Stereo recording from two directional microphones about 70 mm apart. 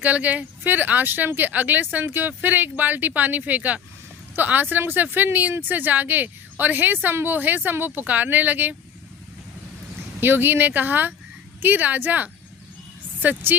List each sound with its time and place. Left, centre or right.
0.0 s speech: right
10.2 s a woman's voice: right